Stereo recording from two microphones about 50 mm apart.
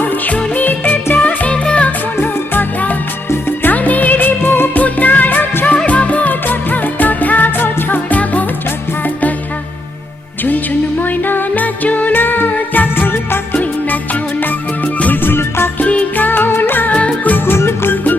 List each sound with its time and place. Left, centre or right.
0.0 s music of bollywood: left
1.1 s music: left
2.2 s music: left
4.8 s music: left
5.6 s music: left
11.0 s music: left
15.0 s music: left
15.8 s music: left
16.9 s music: left
17.3 s music: left